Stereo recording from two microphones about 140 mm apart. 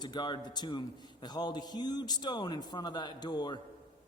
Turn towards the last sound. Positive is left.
turn(degrees=30)  # may be behind; listen again after turning